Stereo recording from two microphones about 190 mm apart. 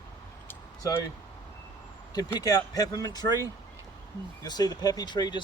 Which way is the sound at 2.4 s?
20° left (ahead or behind).